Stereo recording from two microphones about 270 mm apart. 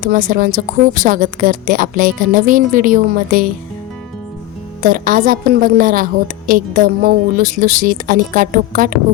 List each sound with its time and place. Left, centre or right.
0.0 s a woman's voice: right
4.8 s speech: right